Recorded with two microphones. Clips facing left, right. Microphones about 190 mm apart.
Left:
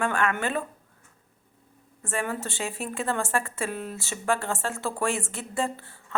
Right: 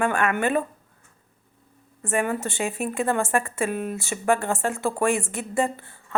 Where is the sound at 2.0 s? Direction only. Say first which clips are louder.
Right 5 dB; 15° right (ahead or behind).